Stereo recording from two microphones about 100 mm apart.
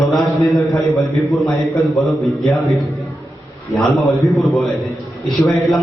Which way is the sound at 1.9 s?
Centre (ahead or behind).